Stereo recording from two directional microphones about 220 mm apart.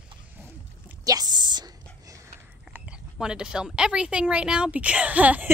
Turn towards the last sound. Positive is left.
turn(degrees=-5)  # may be behind; listen again after turning